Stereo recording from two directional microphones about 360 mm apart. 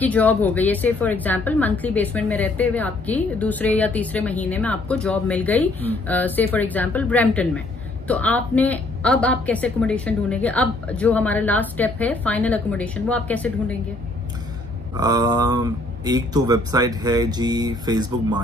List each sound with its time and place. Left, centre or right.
0.0 s a woman's voice: centre
15.0 s speech: centre